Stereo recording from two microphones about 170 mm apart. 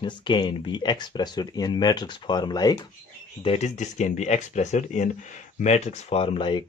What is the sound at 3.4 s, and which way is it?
Speech, 40° left (ahead or behind).